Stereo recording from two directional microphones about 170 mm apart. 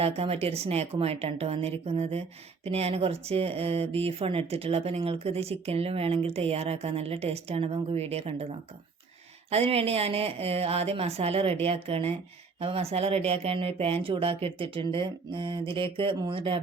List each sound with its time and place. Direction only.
0.0 s speech: 35° right (ahead or behind)